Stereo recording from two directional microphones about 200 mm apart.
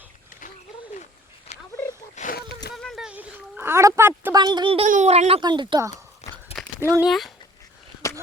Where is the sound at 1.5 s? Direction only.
30° left (ahead or behind).